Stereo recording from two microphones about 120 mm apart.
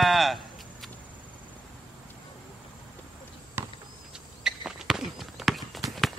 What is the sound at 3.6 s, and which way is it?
Basketball bounce, 20° right (ahead or behind).